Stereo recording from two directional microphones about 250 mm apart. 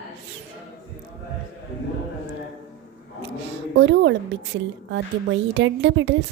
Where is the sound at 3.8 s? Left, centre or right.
Right.